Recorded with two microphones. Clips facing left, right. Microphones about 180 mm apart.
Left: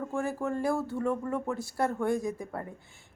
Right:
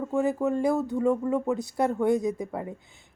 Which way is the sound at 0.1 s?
20° right (ahead or behind).